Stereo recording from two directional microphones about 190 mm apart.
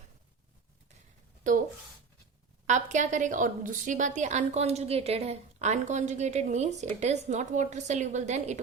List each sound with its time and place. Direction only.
2.6 s a woman's voice: 40° right (ahead or behind)